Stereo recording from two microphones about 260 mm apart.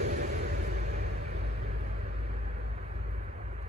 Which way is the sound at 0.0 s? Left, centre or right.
Right.